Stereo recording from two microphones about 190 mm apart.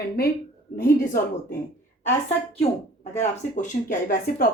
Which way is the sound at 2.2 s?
30° left (ahead or behind).